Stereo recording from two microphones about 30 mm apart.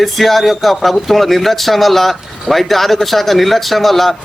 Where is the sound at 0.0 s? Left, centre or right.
Centre.